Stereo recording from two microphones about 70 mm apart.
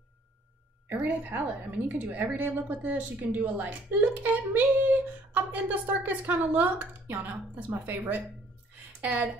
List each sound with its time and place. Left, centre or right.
0.8 s a woman's voice: right